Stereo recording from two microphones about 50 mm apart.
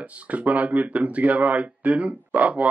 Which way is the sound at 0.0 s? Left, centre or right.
Right.